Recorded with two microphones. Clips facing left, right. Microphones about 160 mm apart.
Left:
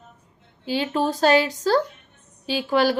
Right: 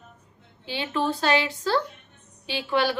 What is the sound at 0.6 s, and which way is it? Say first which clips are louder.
A woman's voice: left 4 dB; 40° left (ahead or behind).